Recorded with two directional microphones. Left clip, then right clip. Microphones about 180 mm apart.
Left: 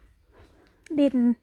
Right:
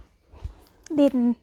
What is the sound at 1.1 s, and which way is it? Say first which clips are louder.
Speech: even; 25° left (ahead or behind).